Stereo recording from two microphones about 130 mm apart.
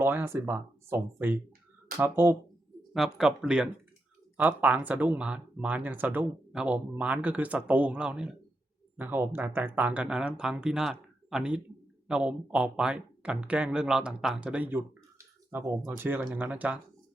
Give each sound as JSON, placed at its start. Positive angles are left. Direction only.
{"t": 0.0, "sound": "speech", "side_deg": -15}
{"t": 2.9, "sound": "speech", "side_deg": -5}